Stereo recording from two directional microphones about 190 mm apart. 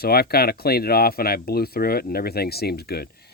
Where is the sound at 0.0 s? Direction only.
55° left (ahead or behind).